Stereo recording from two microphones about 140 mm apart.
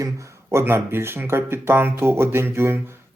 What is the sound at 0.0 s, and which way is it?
Speech, 20° right (ahead or behind).